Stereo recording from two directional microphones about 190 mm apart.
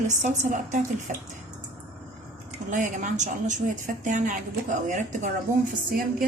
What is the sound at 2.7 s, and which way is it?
A woman's voice, 40° right (ahead or behind).